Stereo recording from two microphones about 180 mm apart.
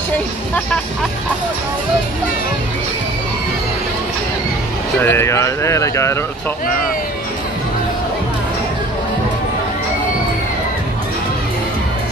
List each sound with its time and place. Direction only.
5.0 s speech: 15° left (ahead or behind)